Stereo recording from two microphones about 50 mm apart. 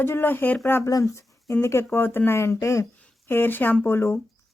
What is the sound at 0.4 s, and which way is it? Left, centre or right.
Speech, left.